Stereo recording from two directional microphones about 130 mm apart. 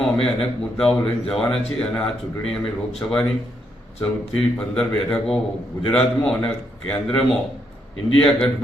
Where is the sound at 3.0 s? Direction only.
20° left (ahead or behind).